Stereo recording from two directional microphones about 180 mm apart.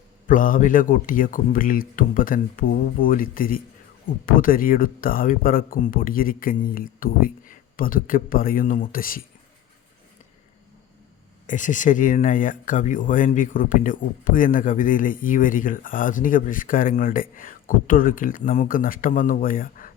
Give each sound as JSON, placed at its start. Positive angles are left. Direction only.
{"t": 0.3, "sound": "speech", "side_deg": 50}
{"t": 11.4, "sound": "speech", "side_deg": 45}